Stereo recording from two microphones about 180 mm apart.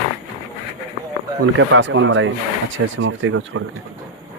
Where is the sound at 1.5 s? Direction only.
90° right.